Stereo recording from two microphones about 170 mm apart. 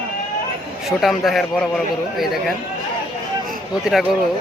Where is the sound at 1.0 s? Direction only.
Centre (ahead or behind).